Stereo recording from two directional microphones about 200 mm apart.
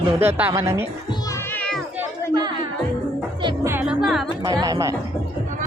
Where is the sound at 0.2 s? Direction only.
10° right (ahead or behind).